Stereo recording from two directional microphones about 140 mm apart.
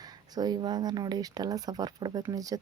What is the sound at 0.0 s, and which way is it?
Speech, 30° right (ahead or behind).